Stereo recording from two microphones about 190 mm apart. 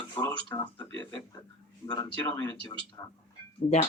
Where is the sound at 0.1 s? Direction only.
15° left (ahead or behind).